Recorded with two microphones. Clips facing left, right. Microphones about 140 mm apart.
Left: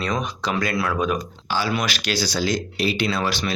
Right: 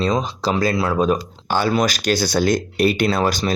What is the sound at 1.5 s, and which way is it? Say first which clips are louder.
Speech: right 6 dB; 50° right (ahead or behind).